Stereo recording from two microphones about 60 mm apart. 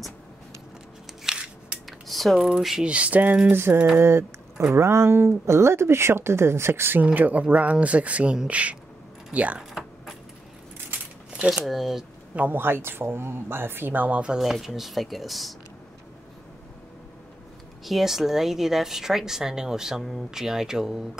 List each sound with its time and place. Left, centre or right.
1.2 s scissors: centre
1.9 s a sound: centre
2.8 s speech: centre
4.0 s speech: right
7.2 s speech: right
9.6 s typing: centre
11.3 s speech: centre
11.6 s speech: centre
12.4 s speech: right
14.4 s speech: centre
17.8 s a woman's voice: centre